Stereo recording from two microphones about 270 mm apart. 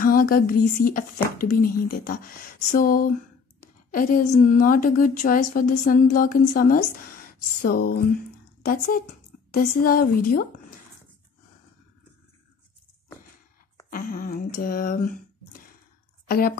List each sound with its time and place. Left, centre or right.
0.0 s a woman's voice: left
13.8 s speech: left
16.3 s a woman's voice: left